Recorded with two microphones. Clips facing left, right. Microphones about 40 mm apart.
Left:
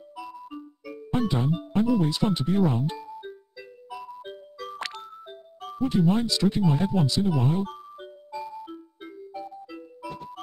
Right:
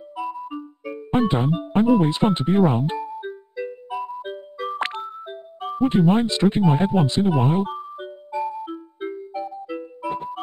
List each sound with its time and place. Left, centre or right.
0.1 s music: centre
0.6 s speech: right
3.2 s music: right
5.8 s speech: right
7.7 s music: centre
8.6 s music: right